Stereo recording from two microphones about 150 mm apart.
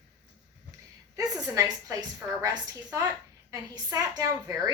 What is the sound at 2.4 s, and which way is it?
A woman's voice, 25° right (ahead or behind).